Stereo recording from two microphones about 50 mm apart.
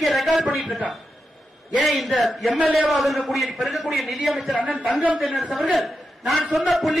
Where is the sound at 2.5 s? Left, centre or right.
Right.